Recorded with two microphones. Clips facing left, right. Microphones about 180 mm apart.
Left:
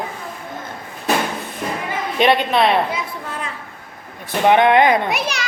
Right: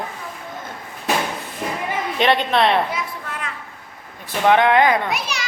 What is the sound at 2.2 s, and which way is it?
Speech, 10° left (ahead or behind).